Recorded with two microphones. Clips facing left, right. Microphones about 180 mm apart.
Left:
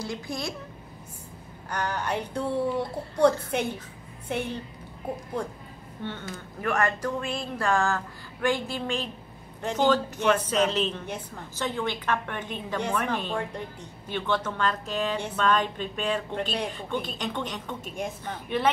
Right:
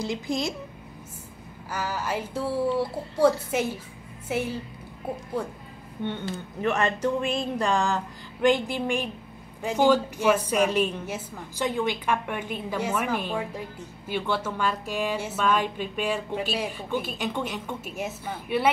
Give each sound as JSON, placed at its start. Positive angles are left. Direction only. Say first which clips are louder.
{"t": 0.0, "sound": "speech", "louder": "right 5 dB", "side_deg": -20}
{"t": 1.7, "sound": "a woman's voice", "louder": "even", "side_deg": -5}
{"t": 6.2, "sound": "a woman's voice", "louder": "right 3 dB", "side_deg": -25}